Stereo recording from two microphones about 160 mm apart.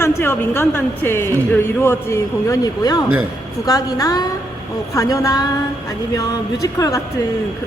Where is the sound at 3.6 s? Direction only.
25° left (ahead or behind).